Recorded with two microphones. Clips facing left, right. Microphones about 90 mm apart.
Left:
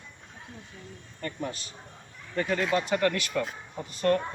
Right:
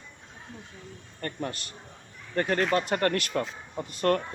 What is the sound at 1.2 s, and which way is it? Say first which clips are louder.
Speech: right 1 dB; 55° right (ahead or behind).